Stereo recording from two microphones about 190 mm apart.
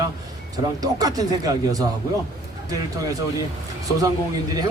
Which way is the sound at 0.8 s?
20° right (ahead or behind).